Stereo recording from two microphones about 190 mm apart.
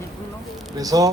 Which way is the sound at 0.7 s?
20° right (ahead or behind).